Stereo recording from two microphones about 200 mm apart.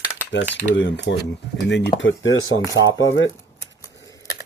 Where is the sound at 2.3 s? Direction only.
80° left.